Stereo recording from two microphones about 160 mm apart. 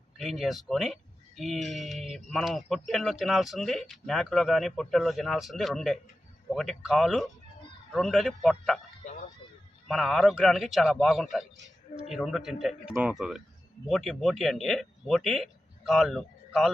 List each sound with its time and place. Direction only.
0.2 s speech: centre (ahead or behind)
9.0 s a sound: 45° left (ahead or behind)
9.9 s speech: centre (ahead or behind)